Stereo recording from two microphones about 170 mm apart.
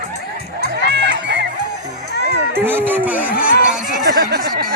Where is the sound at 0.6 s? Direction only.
90° right.